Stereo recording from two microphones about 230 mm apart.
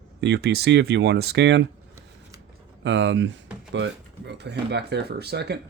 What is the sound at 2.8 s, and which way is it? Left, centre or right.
Speech, right.